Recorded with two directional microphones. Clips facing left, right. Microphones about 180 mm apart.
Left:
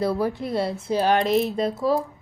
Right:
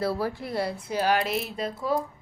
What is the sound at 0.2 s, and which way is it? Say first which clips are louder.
A woman's voice: left 4 dB; 20° left (ahead or behind).